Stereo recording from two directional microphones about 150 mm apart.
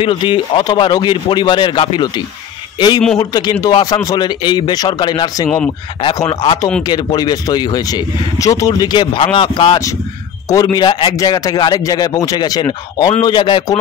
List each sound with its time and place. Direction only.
0.0 s speech: 35° left (ahead or behind)